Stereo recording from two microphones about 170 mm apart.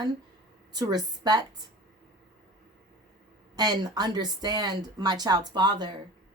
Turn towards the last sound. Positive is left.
turn(degrees=-25)  # may be behind; listen again after turning